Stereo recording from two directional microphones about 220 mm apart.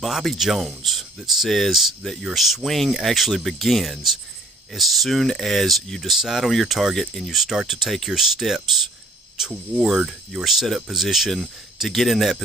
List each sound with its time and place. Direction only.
0.0 s speech: centre (ahead or behind)